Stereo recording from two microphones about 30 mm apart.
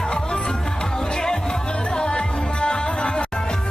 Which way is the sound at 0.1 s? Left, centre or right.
Left.